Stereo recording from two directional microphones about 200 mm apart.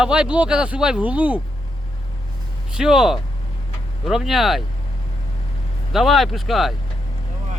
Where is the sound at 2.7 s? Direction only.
5° right (ahead or behind).